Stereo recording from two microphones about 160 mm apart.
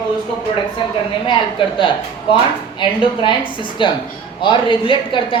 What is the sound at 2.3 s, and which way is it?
Speech, 35° left (ahead or behind).